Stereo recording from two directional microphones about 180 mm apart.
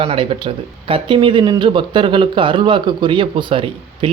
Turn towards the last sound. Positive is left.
turn(degrees=-30)  # may be behind; listen again after turning